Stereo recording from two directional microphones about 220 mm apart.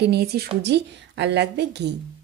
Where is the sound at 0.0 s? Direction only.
45° right (ahead or behind).